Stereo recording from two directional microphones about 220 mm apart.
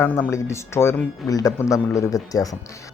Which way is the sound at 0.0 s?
10° left (ahead or behind).